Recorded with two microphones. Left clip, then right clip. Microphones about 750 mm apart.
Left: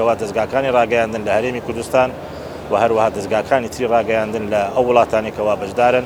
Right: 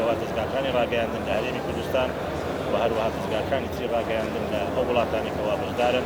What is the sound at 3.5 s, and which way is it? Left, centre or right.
Speech, left.